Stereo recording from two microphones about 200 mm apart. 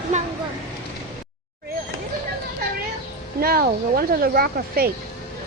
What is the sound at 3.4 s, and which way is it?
Speech, 50° right (ahead or behind).